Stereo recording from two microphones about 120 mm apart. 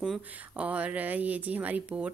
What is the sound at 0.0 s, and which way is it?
Speech, 10° right (ahead or behind).